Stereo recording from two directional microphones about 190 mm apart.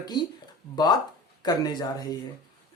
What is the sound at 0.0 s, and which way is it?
Speech, 20° left (ahead or behind).